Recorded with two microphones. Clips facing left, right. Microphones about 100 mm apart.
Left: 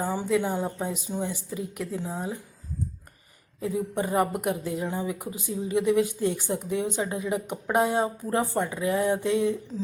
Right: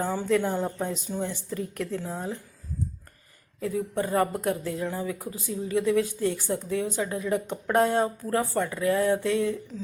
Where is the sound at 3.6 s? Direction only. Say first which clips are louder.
Even; 15° left (ahead or behind).